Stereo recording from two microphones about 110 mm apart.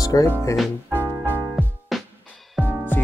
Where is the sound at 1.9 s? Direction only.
Centre (ahead or behind).